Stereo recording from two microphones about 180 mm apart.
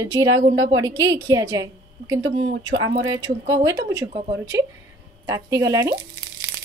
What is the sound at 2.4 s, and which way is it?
Speech, 75° right (ahead or behind).